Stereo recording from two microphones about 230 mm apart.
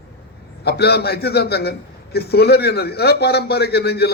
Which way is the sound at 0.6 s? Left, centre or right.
Left.